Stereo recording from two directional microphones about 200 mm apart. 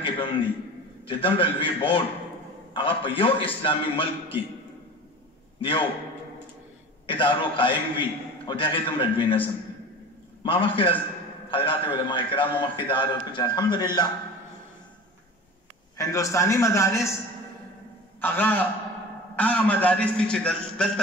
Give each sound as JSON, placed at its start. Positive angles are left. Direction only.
{"t": 0.0, "sound": "a sound", "side_deg": 25}
{"t": 1.0, "sound": "a man's voice", "side_deg": 25}
{"t": 5.6, "sound": "a man's voice", "side_deg": 25}
{"t": 7.1, "sound": "a man's voice", "side_deg": 25}
{"t": 16.0, "sound": "a man's voice", "side_deg": 15}
{"t": 18.2, "sound": "a man's voice", "side_deg": 10}